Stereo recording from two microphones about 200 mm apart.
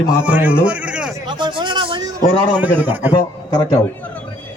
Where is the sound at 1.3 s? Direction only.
25° right (ahead or behind).